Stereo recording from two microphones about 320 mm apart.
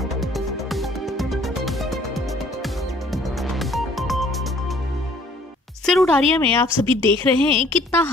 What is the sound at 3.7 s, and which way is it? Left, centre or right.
Music, centre.